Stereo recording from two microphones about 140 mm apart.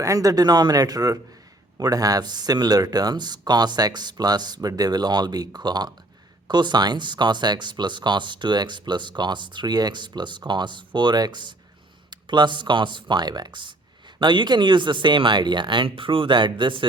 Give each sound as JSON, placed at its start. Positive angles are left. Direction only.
{"t": 0.0, "sound": "speech", "side_deg": -25}